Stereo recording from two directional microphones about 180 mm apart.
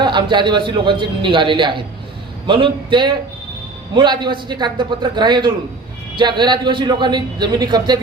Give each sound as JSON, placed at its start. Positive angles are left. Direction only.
{"t": 0.0, "sound": "a man's voice", "side_deg": -25}